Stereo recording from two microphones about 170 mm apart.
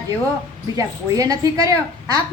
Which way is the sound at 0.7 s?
20° right (ahead or behind).